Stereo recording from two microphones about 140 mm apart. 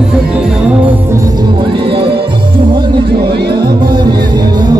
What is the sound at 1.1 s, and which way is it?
Music, 25° right (ahead or behind).